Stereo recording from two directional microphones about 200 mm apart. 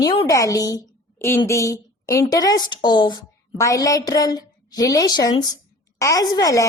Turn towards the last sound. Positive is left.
turn(degrees=15)  # may be behind; listen again after turning